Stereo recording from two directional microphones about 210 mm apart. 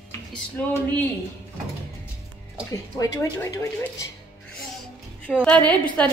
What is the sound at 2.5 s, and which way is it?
Speech, 15° left (ahead or behind).